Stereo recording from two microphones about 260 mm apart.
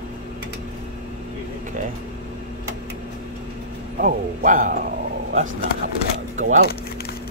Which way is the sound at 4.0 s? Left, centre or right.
Right.